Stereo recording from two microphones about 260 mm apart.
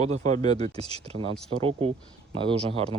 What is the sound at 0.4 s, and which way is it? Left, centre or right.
Speech, centre.